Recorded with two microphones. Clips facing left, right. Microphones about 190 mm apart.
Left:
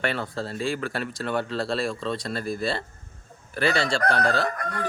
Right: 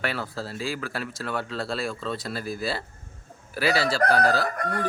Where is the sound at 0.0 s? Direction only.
5° right (ahead or behind).